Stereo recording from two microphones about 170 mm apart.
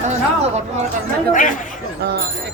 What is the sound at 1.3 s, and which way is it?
Speech, 50° left (ahead or behind).